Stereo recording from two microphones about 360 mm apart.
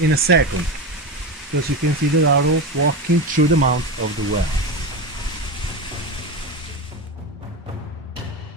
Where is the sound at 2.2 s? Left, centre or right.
Right.